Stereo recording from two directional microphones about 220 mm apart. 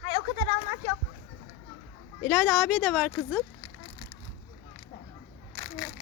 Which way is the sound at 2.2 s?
Centre (ahead or behind).